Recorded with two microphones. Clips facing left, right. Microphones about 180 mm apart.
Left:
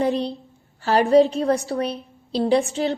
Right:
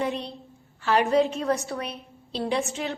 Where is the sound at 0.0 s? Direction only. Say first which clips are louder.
Left 7 dB; 35° left (ahead or behind).